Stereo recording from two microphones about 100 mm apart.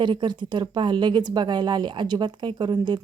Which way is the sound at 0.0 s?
50° right (ahead or behind).